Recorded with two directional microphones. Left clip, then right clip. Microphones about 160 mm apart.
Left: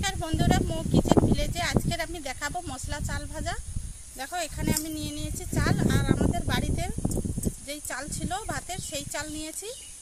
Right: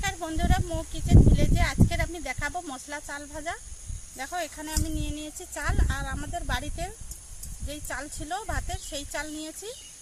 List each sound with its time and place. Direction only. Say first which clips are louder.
0.0 s speech: left 1 dB; centre (ahead or behind)